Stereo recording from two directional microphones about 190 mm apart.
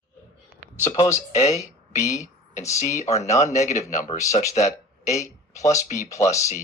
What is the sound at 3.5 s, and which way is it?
Speech, 40° left (ahead or behind).